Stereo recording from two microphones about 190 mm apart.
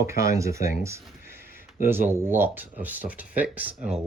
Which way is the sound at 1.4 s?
50° left (ahead or behind).